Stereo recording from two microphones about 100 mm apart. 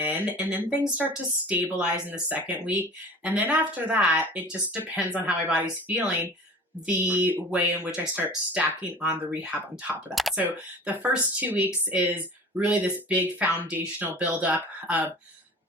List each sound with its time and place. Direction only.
0.0 s speech: 15° right (ahead or behind)